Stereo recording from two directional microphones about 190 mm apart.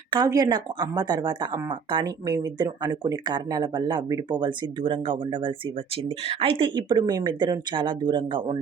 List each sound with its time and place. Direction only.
0.1 s speech: 20° right (ahead or behind)